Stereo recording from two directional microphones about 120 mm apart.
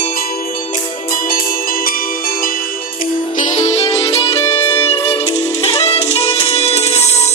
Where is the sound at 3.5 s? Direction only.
75° left (ahead or behind).